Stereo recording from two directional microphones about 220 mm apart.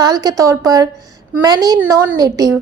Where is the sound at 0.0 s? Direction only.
15° right (ahead or behind).